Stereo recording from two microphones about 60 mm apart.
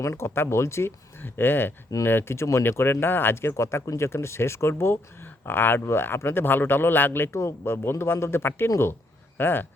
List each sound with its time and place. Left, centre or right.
0.0 s speech: left
2.6 s speech: left